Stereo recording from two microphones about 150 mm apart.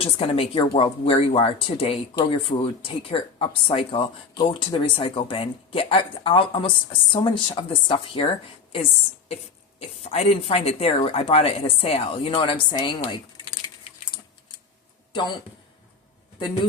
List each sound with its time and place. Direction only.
0.0 s speech: 40° left (ahead or behind)
10.0 s speech: 45° left (ahead or behind)